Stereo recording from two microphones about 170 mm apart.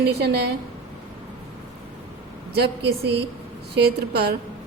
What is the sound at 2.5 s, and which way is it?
A woman's voice, 75° right (ahead or behind).